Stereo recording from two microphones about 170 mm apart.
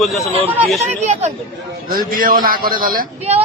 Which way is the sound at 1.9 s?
60° right (ahead or behind).